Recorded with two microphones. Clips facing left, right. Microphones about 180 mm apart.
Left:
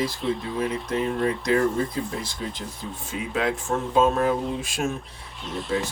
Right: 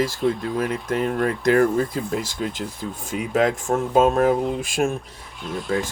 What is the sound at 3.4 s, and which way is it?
Speech, 45° right (ahead or behind).